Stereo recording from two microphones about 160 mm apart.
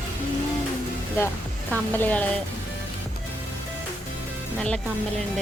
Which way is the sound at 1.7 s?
10° left (ahead or behind).